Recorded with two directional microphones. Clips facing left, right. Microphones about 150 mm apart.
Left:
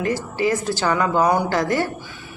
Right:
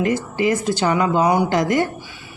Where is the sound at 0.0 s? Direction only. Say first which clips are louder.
Right 2 dB; 20° right (ahead or behind).